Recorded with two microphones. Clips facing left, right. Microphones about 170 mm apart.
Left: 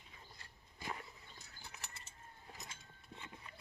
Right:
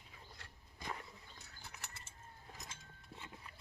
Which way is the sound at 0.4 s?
80° right.